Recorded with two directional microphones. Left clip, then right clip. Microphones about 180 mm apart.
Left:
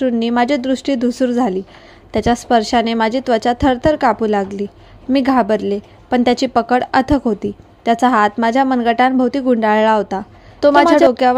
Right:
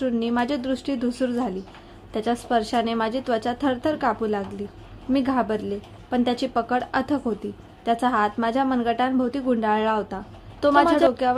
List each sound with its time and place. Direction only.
0.0 s a woman's voice: 35° left (ahead or behind)